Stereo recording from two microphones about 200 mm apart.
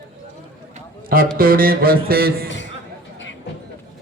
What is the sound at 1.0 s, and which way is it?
Speech, 45° right (ahead or behind).